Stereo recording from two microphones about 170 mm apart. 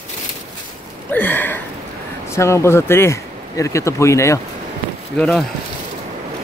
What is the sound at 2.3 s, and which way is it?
Speech, 15° left (ahead or behind).